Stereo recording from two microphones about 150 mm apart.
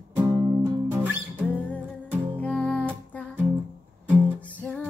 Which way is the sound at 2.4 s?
10° left (ahead or behind).